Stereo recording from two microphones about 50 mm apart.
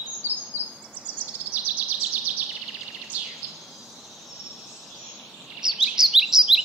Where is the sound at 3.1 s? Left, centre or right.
Right.